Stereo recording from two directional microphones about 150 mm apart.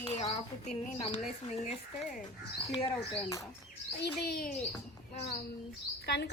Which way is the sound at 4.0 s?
90° left.